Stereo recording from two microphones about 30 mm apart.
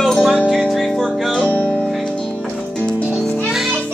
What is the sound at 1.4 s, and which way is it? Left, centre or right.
Music, left.